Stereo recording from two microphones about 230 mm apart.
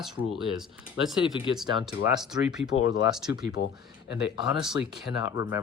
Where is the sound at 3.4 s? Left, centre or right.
Left.